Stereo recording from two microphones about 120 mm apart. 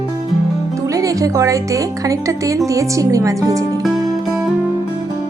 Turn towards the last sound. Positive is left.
turn(degrees=-25)  # may be behind; listen again after turning